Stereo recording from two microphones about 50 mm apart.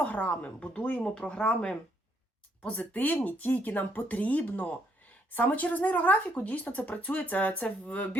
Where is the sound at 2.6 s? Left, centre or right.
Left.